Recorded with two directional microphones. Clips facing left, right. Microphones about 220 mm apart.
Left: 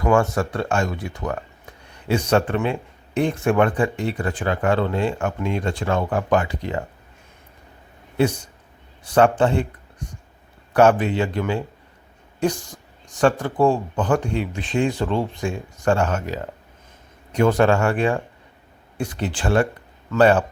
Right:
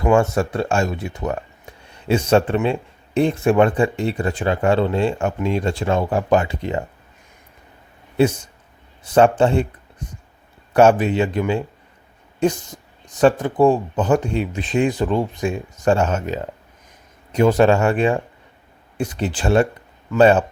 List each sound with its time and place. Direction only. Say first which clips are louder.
0.1 s speech: right 2 dB; 25° right (ahead or behind)
8.1 s speech: right 3 dB; 25° right (ahead or behind)